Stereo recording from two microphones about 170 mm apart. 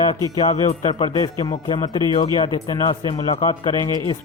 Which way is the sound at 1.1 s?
20° left (ahead or behind).